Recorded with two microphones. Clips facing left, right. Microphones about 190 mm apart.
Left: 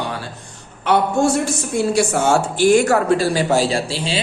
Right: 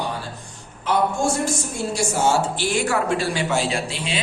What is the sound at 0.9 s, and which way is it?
Speech, 70° left (ahead or behind).